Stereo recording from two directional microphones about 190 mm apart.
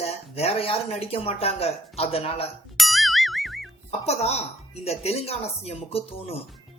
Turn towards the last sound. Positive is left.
turn(degrees=30)  # may be behind; listen again after turning